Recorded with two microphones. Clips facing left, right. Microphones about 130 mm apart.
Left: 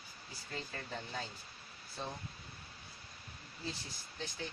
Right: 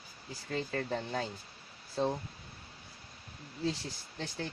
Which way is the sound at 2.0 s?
90° right.